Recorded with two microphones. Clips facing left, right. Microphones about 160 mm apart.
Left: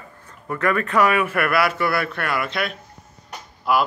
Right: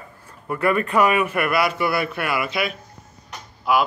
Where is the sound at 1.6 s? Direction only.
20° right (ahead or behind).